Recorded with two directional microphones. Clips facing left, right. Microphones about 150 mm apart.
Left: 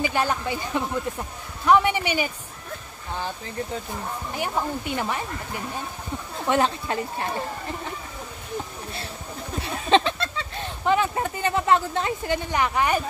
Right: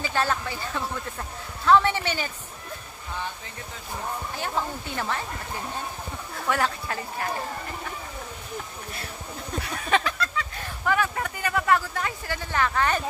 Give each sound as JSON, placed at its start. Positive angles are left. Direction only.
{"t": 0.0, "sound": "speech", "side_deg": 15}
{"t": 4.4, "sound": "speech", "side_deg": 15}
{"t": 6.3, "sound": "speech", "side_deg": 20}
{"t": 9.6, "sound": "speech", "side_deg": 25}